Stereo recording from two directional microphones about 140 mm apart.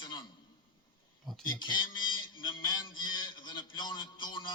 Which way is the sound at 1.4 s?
35° left (ahead or behind).